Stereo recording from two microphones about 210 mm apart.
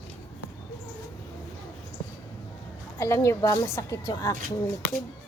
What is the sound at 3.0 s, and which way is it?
A woman's voice, 15° left (ahead or behind).